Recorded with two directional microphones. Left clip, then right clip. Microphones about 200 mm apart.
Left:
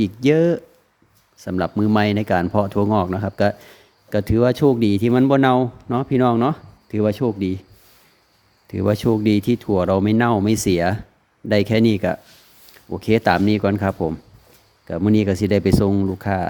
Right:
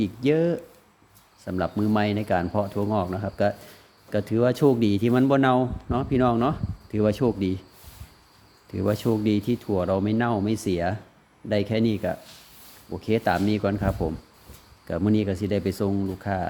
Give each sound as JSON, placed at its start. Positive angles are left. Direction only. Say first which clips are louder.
{"t": 0.0, "sound": "speech", "louder": "left 6 dB", "side_deg": 25}
{"t": 8.7, "sound": "speech", "louder": "left 6 dB", "side_deg": 25}